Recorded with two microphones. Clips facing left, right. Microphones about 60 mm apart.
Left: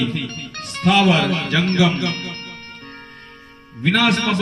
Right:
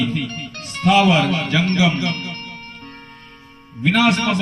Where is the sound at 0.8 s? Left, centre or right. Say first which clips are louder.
Right 1 dB; left.